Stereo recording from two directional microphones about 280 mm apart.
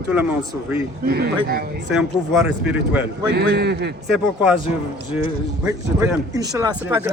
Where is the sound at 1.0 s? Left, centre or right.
Right.